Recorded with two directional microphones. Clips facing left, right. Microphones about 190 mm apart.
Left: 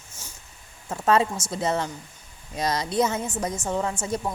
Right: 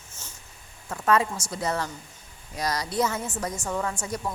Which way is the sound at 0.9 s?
25° left (ahead or behind).